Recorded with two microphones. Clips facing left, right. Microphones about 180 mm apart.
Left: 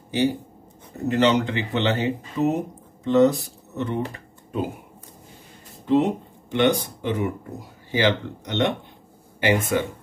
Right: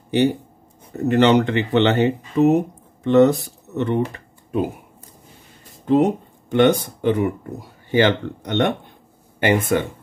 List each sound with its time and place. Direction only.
1.0 s speech: 65° right (ahead or behind)
5.9 s a sound: 50° right (ahead or behind)
7.0 s speech: 60° right (ahead or behind)